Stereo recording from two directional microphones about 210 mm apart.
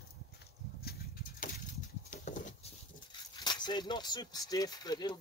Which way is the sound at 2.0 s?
35° left (ahead or behind).